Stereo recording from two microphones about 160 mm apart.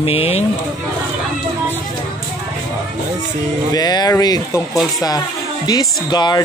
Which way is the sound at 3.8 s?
25° left (ahead or behind).